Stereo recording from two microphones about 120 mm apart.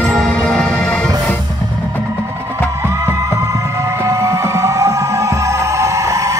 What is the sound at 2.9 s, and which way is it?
Music, 25° right (ahead or behind).